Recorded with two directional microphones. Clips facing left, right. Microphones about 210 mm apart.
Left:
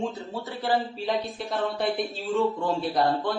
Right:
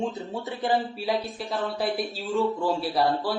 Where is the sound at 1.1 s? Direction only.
Centre (ahead or behind).